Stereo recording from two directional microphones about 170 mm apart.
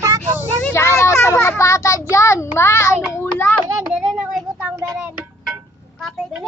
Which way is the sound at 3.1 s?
10° left (ahead or behind).